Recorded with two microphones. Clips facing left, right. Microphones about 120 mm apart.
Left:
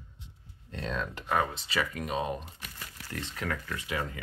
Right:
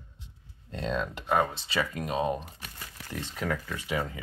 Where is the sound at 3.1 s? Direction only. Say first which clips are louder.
Right 3 dB; 10° right (ahead or behind).